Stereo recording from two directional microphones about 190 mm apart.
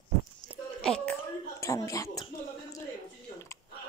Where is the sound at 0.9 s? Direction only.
5° left (ahead or behind).